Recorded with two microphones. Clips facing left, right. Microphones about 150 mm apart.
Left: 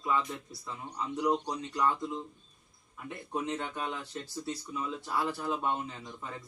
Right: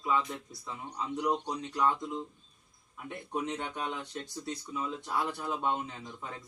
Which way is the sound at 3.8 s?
Centre (ahead or behind).